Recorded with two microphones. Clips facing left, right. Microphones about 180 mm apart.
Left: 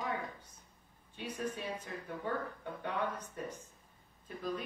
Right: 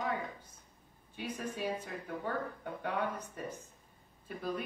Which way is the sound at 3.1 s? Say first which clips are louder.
Right 1 dB; 10° right (ahead or behind).